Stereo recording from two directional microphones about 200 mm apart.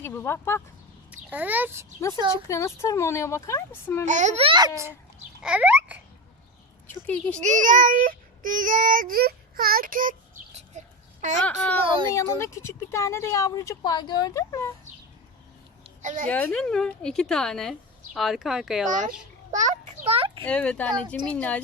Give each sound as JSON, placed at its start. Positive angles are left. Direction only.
{"t": 0.0, "sound": "speech", "side_deg": 10}
{"t": 1.1, "sound": "a child's voice", "side_deg": -10}
{"t": 2.3, "sound": "speech", "side_deg": 15}
{"t": 4.0, "sound": "speech", "side_deg": -35}
{"t": 5.4, "sound": "babbling", "side_deg": -5}
{"t": 6.8, "sound": "speech", "side_deg": 10}
{"t": 7.4, "sound": "child singing", "side_deg": -40}
{"t": 11.4, "sound": "speech", "side_deg": 5}
{"t": 11.8, "sound": "speech", "side_deg": -25}
{"t": 12.1, "sound": "speech", "side_deg": 15}
{"t": 15.8, "sound": "a sound", "side_deg": -35}
{"t": 16.3, "sound": "speech", "side_deg": 5}
{"t": 19.5, "sound": "a child's voice", "side_deg": -40}
{"t": 20.4, "sound": "speech", "side_deg": 5}